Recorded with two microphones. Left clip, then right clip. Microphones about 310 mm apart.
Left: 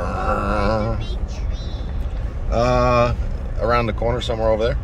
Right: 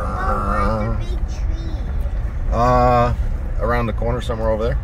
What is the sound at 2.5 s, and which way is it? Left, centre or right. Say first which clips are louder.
Speech: right 2 dB; centre.